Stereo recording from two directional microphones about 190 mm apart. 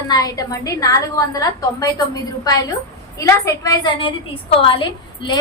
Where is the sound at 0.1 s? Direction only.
20° left (ahead or behind).